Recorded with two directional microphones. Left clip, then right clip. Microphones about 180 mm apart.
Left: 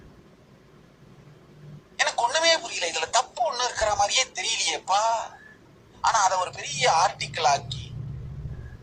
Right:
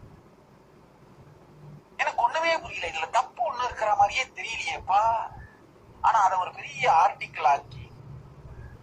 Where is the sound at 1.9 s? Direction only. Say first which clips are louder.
Left 1 dB; 15° left (ahead or behind).